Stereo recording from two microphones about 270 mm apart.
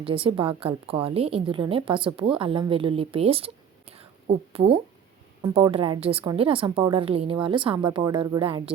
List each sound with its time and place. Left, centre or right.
0.0 s a woman's voice: centre